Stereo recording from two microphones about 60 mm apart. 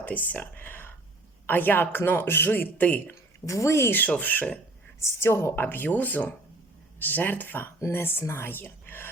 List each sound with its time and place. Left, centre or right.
0.0 s a sound: left
1.5 s speech: left
3.4 s a woman's voice: left
4.2 s speech: left
4.9 s speech: left